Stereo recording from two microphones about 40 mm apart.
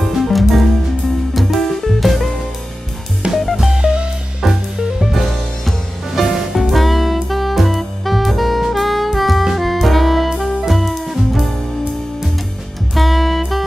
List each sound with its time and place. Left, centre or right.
0.0 s music: centre
3.6 s music: right
4.4 s music: centre
6.3 s music: centre
12.9 s music: centre